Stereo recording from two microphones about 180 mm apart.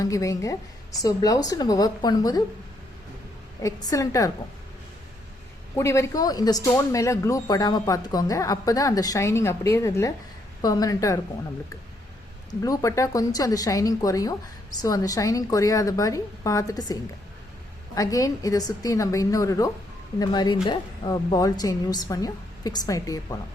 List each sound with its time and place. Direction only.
0.0 s a woman's voice: 20° left (ahead or behind)
3.6 s speech: 20° left (ahead or behind)
5.7 s a woman's voice: 15° left (ahead or behind)
12.5 s a woman's voice: 20° left (ahead or behind)